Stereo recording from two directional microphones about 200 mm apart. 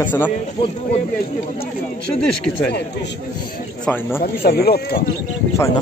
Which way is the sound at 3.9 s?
10° left (ahead or behind).